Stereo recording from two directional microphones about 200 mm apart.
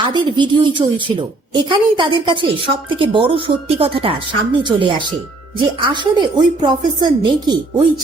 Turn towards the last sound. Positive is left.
turn(degrees=-20)  # may be behind; listen again after turning